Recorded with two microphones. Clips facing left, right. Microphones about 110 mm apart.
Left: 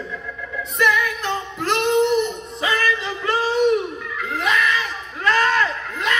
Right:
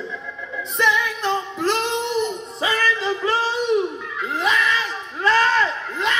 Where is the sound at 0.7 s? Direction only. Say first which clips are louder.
Left 1 dB; 30° right (ahead or behind).